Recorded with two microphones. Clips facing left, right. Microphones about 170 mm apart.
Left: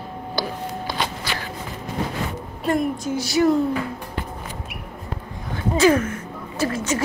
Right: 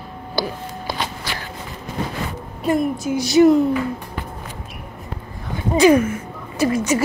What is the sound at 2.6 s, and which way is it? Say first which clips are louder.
Speech: right 2 dB; 5° right (ahead or behind).